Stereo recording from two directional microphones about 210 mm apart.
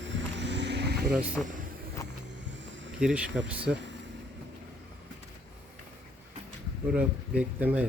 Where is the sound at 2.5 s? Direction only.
60° right (ahead or behind).